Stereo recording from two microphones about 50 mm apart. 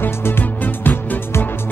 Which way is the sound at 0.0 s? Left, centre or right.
Left.